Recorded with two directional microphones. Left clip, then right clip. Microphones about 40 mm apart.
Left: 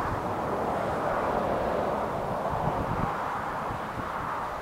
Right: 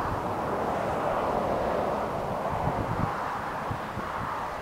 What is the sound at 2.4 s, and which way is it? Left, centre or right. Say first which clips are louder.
Vehicle: even; right.